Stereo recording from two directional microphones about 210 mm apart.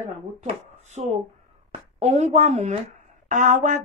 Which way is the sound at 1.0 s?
30° right (ahead or behind).